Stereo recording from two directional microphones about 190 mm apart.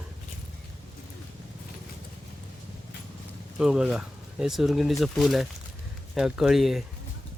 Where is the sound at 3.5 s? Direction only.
5° right (ahead or behind).